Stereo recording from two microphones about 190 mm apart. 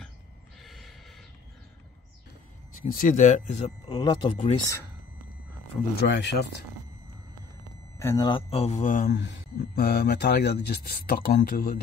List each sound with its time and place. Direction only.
0.6 s gasp: centre (ahead or behind)
2.7 s speech: 45° left (ahead or behind)
3.8 s speech: 25° left (ahead or behind)
5.9 s speech: 65° left (ahead or behind)
8.0 s speech: 15° left (ahead or behind)
8.3 s speech: 30° left (ahead or behind)
9.1 s speech: 65° left (ahead or behind)